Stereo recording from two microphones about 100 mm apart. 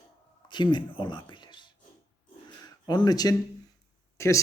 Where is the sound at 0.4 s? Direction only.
50° left (ahead or behind).